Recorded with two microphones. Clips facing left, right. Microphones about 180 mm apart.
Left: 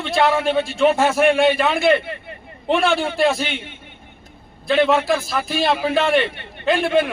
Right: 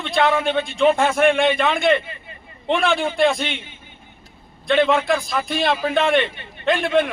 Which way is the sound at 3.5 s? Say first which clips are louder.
Left 4 dB; 70° left (ahead or behind).